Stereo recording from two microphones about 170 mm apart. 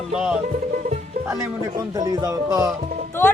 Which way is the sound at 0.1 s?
5° right (ahead or behind).